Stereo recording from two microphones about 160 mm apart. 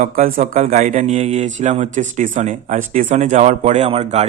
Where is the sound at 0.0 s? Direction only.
50° right (ahead or behind).